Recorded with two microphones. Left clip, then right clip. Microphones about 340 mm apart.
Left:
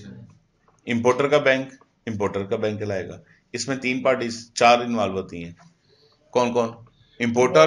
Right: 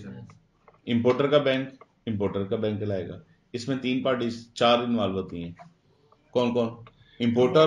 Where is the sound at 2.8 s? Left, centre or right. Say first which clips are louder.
Left 3 dB; centre.